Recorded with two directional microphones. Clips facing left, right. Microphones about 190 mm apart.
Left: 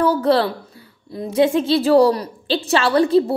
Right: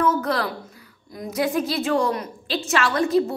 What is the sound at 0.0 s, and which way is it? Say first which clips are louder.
A woman's voice: left 6 dB; 35° left (ahead or behind).